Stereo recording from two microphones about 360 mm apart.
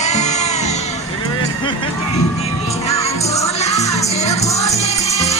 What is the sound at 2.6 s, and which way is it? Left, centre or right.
Music, centre.